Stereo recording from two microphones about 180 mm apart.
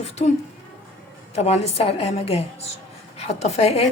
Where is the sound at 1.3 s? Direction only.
35° left (ahead or behind).